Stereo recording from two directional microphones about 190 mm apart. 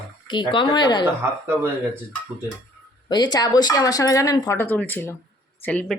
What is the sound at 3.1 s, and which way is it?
Speech, 20° left (ahead or behind).